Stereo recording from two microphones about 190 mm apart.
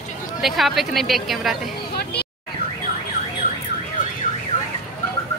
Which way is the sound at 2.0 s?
55° left (ahead or behind).